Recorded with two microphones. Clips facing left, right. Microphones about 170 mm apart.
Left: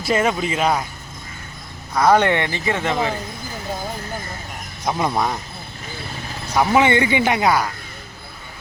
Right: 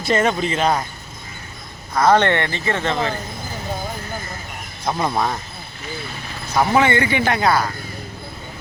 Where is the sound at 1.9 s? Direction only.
10° left (ahead or behind).